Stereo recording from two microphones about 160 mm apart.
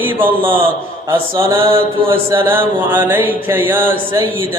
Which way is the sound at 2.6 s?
15° right (ahead or behind).